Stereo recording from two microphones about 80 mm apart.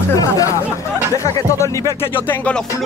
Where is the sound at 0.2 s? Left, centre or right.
Left.